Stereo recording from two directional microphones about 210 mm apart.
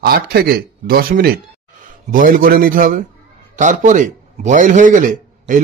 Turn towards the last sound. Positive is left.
turn(degrees=-40)  # may be behind; listen again after turning